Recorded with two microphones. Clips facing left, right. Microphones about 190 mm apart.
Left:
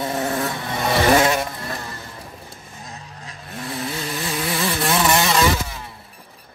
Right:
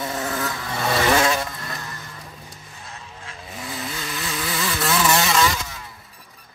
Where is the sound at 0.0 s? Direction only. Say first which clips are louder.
Left 4 dB; 25° left (ahead or behind).